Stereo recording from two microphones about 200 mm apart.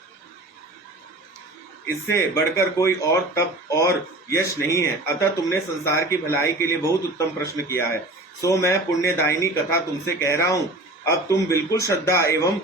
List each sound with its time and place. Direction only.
1.9 s speech: 15° left (ahead or behind)